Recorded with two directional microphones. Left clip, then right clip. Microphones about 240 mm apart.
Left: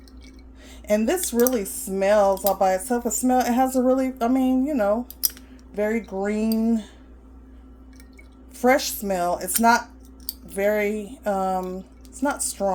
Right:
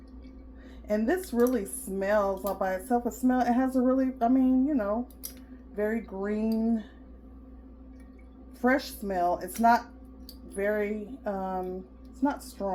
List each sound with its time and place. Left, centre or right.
0.9 s speech: left
8.6 s a woman's voice: left